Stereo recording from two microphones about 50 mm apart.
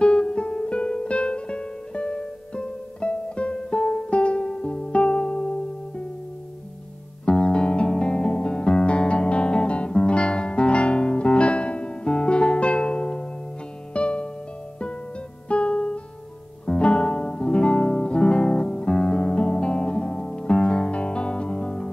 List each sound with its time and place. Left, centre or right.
0.0 s music: centre
7.2 s music: centre
15.4 s music: left